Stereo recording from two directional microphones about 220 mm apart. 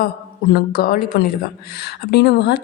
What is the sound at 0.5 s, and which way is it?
A woman's voice, 40° left (ahead or behind).